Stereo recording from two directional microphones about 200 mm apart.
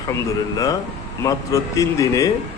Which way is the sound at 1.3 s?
15° left (ahead or behind).